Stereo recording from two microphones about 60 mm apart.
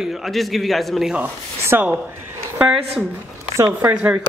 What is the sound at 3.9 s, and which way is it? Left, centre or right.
Speech, centre.